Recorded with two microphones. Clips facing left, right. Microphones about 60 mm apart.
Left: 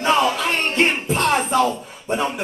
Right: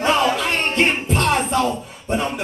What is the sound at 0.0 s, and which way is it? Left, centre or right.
Music, centre.